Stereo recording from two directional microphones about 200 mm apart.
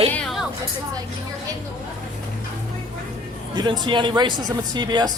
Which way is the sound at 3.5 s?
20° right (ahead or behind).